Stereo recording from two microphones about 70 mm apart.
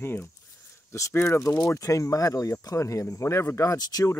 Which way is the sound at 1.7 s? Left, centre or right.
Left.